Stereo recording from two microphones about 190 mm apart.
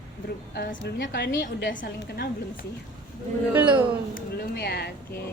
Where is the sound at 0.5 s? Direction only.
60° left (ahead or behind).